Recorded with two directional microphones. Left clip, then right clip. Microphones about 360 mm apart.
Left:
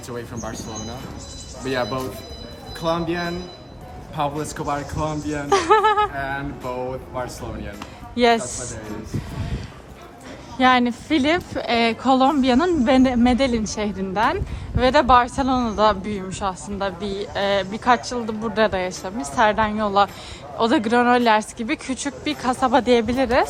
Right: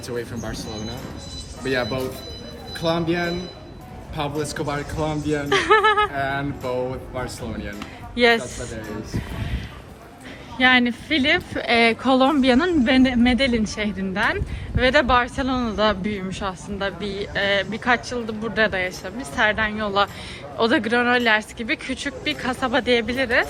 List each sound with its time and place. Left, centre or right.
0.1 s a woman's voice: centre
1.6 s a woman's voice: centre
10.6 s a woman's voice: centre